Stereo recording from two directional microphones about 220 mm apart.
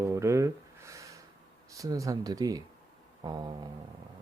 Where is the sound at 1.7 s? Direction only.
15° right (ahead or behind).